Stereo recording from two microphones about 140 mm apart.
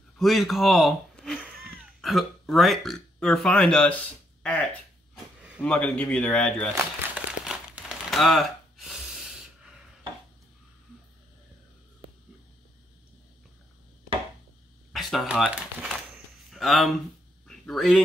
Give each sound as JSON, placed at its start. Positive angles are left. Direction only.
{"t": 0.2, "sound": "a man's voice", "side_deg": 0}
{"t": 6.7, "sound": "crumpling", "side_deg": -20}
{"t": 7.4, "sound": "tearing", "side_deg": 0}
{"t": 14.9, "sound": "a sound", "side_deg": 0}
{"t": 16.5, "sound": "speech", "side_deg": 0}